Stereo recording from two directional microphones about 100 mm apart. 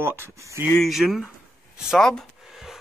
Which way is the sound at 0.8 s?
Centre (ahead or behind).